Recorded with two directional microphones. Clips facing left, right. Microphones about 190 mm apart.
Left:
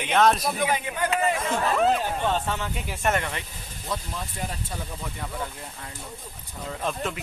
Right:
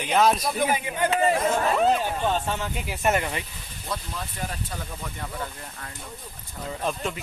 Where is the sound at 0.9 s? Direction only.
25° right (ahead or behind).